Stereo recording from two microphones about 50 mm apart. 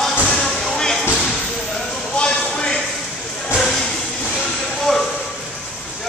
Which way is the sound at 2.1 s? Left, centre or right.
Centre.